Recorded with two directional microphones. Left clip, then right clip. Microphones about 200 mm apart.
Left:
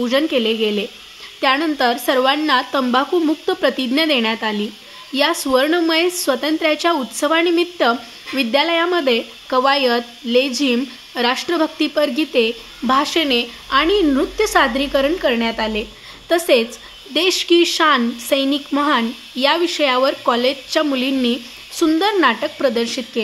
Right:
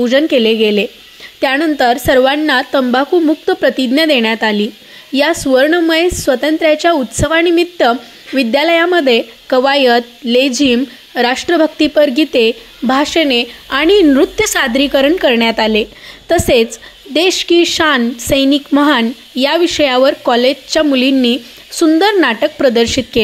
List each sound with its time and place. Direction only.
0.0 s a woman's voice: 25° right (ahead or behind)